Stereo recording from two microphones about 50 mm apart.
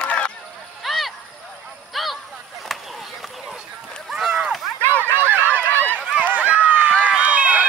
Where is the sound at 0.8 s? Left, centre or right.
Centre.